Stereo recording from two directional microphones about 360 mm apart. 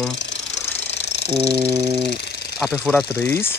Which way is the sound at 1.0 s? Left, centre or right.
Left.